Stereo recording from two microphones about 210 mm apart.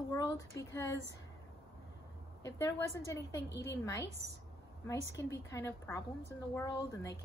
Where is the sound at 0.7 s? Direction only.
15° left (ahead or behind).